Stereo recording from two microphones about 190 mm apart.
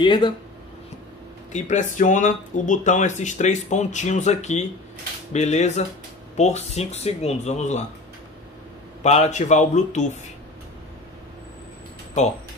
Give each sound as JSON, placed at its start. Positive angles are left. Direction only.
{"t": 0.0, "sound": "speech", "side_deg": 25}
{"t": 1.5, "sound": "speech", "side_deg": 40}
{"t": 9.0, "sound": "speech", "side_deg": 35}